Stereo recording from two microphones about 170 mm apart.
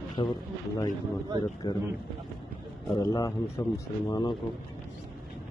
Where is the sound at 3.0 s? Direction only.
20° left (ahead or behind).